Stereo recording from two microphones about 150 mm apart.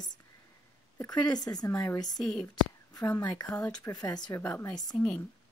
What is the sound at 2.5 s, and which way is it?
A woman's voice, 20° left (ahead or behind).